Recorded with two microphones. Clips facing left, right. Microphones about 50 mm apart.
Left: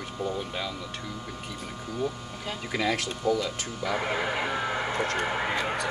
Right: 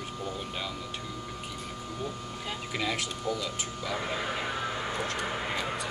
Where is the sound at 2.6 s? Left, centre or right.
Left.